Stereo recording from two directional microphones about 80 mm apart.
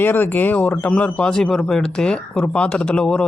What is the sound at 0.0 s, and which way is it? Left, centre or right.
Speech, left.